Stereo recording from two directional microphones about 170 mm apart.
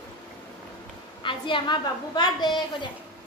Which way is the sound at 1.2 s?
30° left (ahead or behind).